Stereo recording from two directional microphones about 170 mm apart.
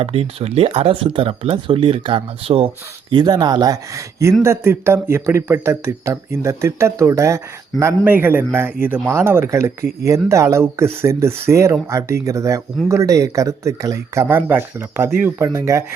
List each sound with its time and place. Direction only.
0.0 s a man's voice: 35° right (ahead or behind); by 15.8 s 20° right (ahead or behind)